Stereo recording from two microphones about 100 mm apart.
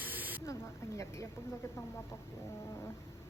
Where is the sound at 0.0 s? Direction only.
15° right (ahead or behind).